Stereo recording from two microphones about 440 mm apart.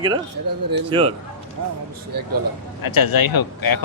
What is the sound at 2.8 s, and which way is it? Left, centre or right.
Speech, left.